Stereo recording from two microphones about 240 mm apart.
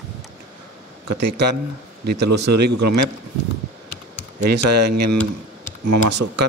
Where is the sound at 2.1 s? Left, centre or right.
Right.